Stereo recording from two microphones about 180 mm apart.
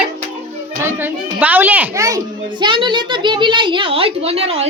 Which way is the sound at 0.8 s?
10° right (ahead or behind).